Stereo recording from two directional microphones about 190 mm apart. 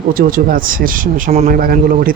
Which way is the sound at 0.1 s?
45° right (ahead or behind).